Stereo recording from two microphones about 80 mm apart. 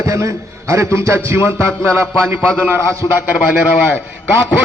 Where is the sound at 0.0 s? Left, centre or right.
Right.